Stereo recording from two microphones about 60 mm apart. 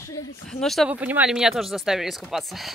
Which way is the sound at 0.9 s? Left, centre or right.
Right.